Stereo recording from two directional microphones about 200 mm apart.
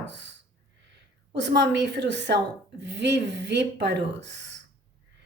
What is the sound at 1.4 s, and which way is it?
Speech, 60° right (ahead or behind).